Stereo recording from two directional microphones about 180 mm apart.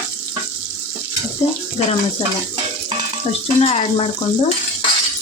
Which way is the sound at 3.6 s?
35° left (ahead or behind).